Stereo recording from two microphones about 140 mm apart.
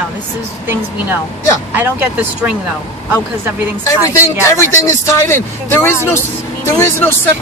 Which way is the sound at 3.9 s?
20° left (ahead or behind).